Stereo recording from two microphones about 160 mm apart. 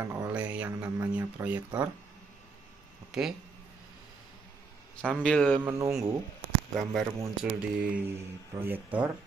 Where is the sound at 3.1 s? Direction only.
5° right (ahead or behind).